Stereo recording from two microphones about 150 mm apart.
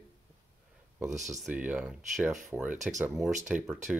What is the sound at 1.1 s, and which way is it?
Speech, 55° right (ahead or behind).